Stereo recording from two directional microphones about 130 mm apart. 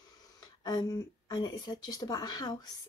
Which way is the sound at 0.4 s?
30° left (ahead or behind).